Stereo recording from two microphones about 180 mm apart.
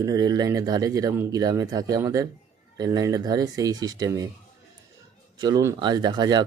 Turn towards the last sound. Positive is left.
turn(degrees=-25)  # may be behind; listen again after turning